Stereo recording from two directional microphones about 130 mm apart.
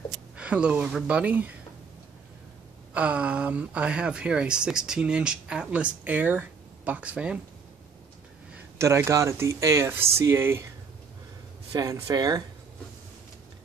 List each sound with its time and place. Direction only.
0.4 s speech: 10° right (ahead or behind)
2.9 s speech: 10° right (ahead or behind)
8.7 s speech: 20° right (ahead or behind)
11.7 s speech: 25° right (ahead or behind)